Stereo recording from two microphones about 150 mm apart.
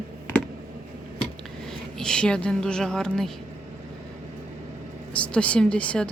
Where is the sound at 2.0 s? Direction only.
5° left (ahead or behind).